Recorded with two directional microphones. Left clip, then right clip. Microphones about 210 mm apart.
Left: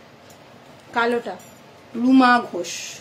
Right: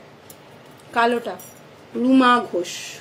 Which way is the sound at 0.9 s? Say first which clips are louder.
Right 2 dB; 5° right (ahead or behind).